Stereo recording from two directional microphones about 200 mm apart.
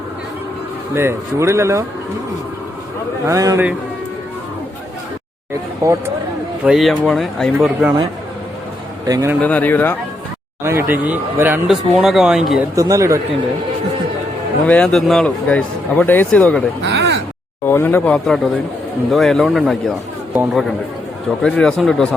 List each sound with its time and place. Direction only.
0.9 s speech: 15° right (ahead or behind)
3.2 s speech: 15° right (ahead or behind)
6.7 s speech: centre (ahead or behind)
9.0 s speech: 15° right (ahead or behind)
9.4 s speech: 5° left (ahead or behind)
10.6 s speech: 10° right (ahead or behind)
12.7 s speech: 15° right (ahead or behind)
14.7 s speech: 5° left (ahead or behind)
16.8 s a sound: 55° right (ahead or behind)
17.7 s speech: 10° left (ahead or behind)